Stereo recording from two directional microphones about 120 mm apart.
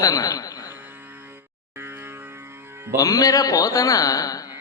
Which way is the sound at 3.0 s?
30° left (ahead or behind).